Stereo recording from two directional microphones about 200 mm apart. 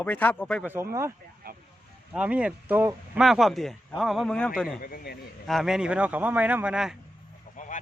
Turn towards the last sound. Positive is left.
turn(degrees=40)  # may be behind; listen again after turning